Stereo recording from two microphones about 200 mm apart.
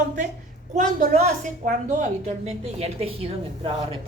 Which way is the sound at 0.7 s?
40° right (ahead or behind).